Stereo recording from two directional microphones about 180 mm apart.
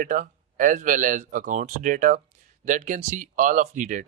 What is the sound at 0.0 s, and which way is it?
Speech, 45° right (ahead or behind).